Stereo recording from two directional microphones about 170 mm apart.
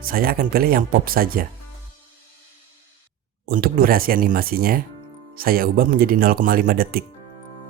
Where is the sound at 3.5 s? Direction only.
60° right (ahead or behind).